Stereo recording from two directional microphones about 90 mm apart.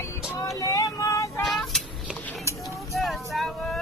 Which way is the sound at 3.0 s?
Centre (ahead or behind).